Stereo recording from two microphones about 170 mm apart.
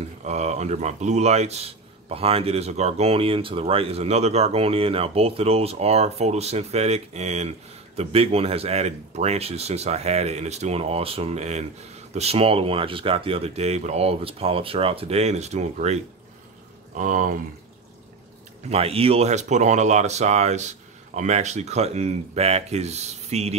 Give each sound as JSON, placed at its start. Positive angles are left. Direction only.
{"t": 0.2, "sound": "speech", "side_deg": -40}
{"t": 16.9, "sound": "speech", "side_deg": -50}
{"t": 18.7, "sound": "speech", "side_deg": -35}